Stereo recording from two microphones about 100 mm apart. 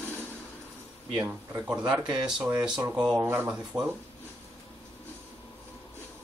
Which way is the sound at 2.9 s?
10° right (ahead or behind).